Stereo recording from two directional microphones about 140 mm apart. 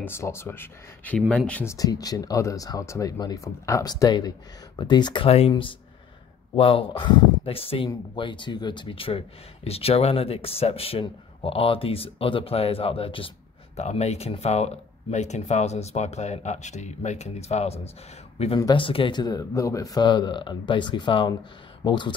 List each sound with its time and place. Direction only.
0.0 s a man's voice: 15° left (ahead or behind); by 13.3 s 40° left (ahead or behind)
13.7 s speech: 50° left (ahead or behind)
18.6 s a man's voice: 35° left (ahead or behind)